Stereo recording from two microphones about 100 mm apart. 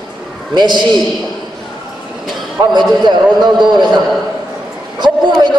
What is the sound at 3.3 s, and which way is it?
Speech, 45° right (ahead or behind).